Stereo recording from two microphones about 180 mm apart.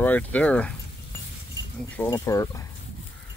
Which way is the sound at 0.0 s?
10° left (ahead or behind).